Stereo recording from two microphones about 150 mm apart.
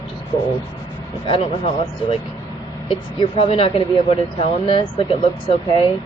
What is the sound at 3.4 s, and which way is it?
Speech, 40° left (ahead or behind).